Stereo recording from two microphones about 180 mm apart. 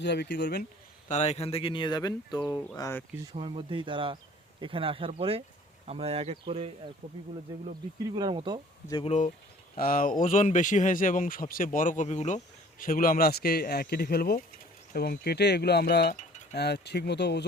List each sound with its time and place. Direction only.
0.0 s speech: 70° left (ahead or behind)
1.0 s speech: 40° left (ahead or behind); by 3.0 s 20° left (ahead or behind)
3.3 s speech: 30° right (ahead or behind)
8.1 s speech: 25° right (ahead or behind)
9.0 s speech: 40° left (ahead or behind)
9.7 s speech: 55° left (ahead or behind)
12.8 s speech: 50° left (ahead or behind)
16.1 s a sound: 40° left (ahead or behind)
16.6 s speech: 65° left (ahead or behind)